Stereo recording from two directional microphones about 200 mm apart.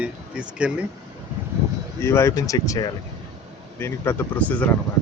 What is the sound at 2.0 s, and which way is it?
Speech, 10° left (ahead or behind).